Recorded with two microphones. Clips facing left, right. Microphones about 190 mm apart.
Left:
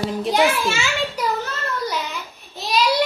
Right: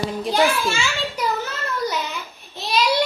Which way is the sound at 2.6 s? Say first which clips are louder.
Left 1 dB; centre (ahead or behind).